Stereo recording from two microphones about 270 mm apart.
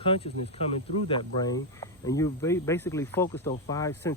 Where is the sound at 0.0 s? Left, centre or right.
Centre.